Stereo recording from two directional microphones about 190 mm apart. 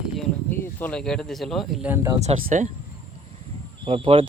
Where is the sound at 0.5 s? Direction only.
10° left (ahead or behind).